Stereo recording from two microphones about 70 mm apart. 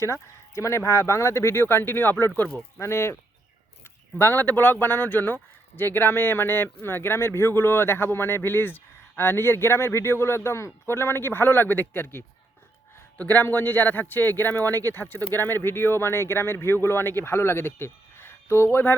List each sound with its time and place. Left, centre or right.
0.0 s speech: left
2.8 s speech: left
4.2 s speech: left
14.7 s speech: right
14.9 s speech: left